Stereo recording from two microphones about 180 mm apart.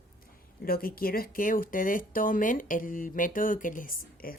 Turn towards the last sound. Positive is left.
turn(degrees=50)  # may be behind; listen again after turning